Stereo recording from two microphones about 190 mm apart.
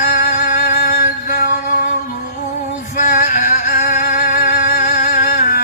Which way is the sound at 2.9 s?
40° left (ahead or behind).